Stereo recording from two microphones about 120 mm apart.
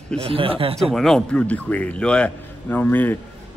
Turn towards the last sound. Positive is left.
turn(degrees=15)  # may be behind; listen again after turning